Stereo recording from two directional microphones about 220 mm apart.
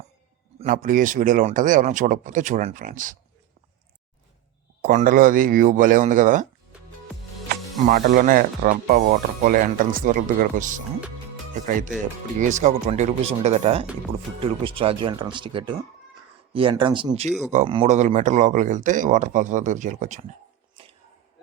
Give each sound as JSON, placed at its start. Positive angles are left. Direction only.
{"t": 0.6, "sound": "speech", "side_deg": -40}
{"t": 4.8, "sound": "speech", "side_deg": -35}
{"t": 7.9, "sound": "speech", "side_deg": -40}